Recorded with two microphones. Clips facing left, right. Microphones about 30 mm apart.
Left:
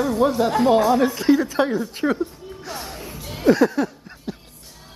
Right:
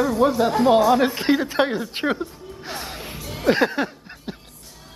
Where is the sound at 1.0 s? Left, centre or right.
Right.